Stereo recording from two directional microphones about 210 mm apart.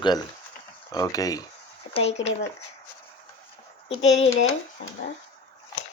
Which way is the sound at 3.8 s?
30° left (ahead or behind).